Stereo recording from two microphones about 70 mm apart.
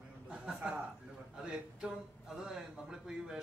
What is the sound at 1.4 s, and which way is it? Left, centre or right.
A man's voice, centre.